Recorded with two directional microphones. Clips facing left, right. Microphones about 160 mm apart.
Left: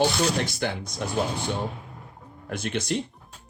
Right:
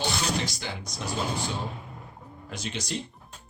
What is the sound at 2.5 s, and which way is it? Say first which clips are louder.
Speech: left 7 dB; 55° left (ahead or behind).